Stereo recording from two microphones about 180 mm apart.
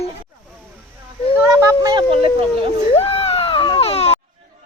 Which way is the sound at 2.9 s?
30° left (ahead or behind).